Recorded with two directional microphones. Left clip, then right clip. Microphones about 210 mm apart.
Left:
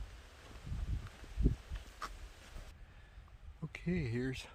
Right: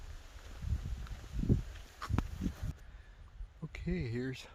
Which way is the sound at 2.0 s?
15° right (ahead or behind).